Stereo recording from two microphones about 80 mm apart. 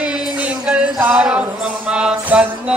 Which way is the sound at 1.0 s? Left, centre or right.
Centre.